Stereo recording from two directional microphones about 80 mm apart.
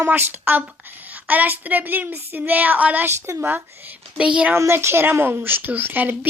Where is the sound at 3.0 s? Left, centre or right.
Right.